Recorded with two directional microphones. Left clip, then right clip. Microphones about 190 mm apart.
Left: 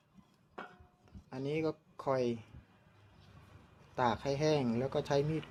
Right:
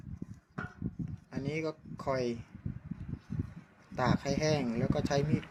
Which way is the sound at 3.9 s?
5° left (ahead or behind).